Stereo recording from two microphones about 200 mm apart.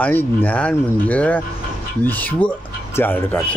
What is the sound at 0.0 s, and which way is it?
Speech, 10° left (ahead or behind).